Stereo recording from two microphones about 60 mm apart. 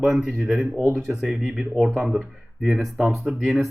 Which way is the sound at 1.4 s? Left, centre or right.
Centre.